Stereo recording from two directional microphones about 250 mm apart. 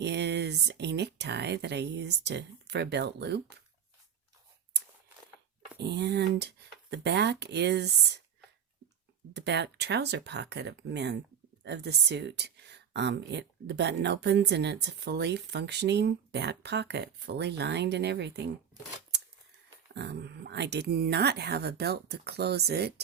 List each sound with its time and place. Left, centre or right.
0.0 s speech: right
5.7 s speech: right
9.3 s speech: right
19.9 s speech: right